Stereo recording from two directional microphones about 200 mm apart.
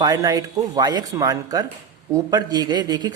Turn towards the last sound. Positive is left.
turn(degrees=-20)  # may be behind; listen again after turning